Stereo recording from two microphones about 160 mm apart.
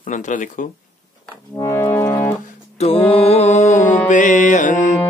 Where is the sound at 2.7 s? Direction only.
35° left (ahead or behind).